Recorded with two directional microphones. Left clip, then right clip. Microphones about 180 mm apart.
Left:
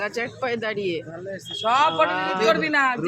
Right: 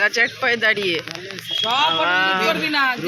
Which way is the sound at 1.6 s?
20° left (ahead or behind).